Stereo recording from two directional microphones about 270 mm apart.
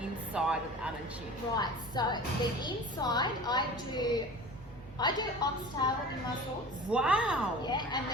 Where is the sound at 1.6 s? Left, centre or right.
Centre.